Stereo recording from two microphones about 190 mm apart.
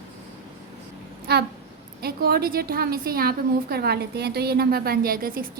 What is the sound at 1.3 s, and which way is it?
A woman's voice, 60° right (ahead or behind).